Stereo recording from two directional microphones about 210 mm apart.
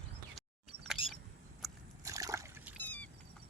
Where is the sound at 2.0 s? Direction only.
15° right (ahead or behind).